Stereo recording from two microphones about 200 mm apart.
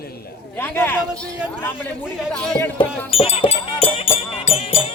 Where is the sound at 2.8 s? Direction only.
30° left (ahead or behind).